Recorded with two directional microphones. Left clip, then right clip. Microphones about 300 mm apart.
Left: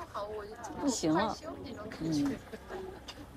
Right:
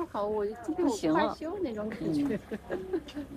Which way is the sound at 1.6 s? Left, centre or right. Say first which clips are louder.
Right 7 dB; centre.